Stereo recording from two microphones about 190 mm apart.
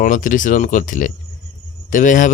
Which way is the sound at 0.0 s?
45° left (ahead or behind).